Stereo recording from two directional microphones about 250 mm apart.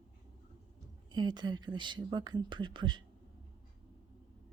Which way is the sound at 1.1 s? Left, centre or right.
Centre.